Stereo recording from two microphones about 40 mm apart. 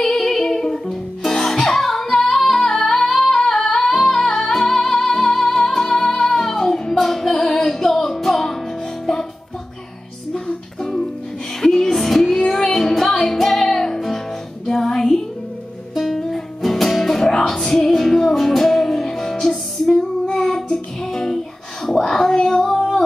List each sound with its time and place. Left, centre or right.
0.0 s music: centre
10.8 s music: centre
20.2 s child singing: centre
20.7 s music: centre
21.8 s a sound: centre
22.6 s female singing: centre